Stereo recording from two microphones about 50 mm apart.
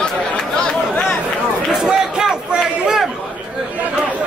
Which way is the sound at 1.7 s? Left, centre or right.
Centre.